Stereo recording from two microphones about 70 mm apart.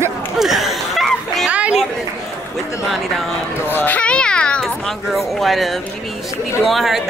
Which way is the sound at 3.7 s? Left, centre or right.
Left.